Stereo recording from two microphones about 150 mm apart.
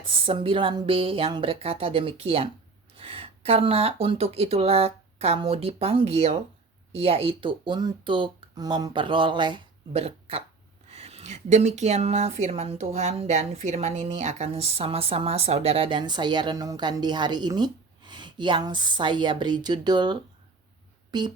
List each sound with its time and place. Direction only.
0.0 s speech: 35° right (ahead or behind)
9.9 s speech: 40° right (ahead or behind)